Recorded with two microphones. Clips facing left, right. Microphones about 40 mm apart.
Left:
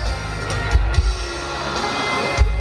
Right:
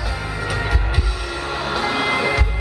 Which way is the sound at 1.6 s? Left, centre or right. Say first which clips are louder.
Right 2 dB; centre.